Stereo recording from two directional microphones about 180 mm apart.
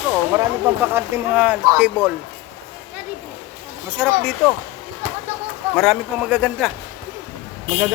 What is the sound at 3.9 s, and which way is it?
Speech, 5° right (ahead or behind).